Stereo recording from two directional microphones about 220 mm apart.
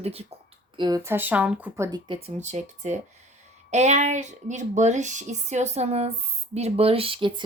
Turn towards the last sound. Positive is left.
turn(degrees=-25)  # may be behind; listen again after turning